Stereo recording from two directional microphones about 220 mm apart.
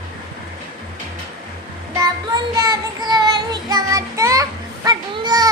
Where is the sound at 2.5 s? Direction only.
15° right (ahead or behind).